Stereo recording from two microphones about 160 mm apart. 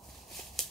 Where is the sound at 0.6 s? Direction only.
Centre (ahead or behind).